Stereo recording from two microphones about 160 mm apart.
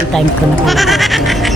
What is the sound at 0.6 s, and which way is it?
Goat, centre (ahead or behind).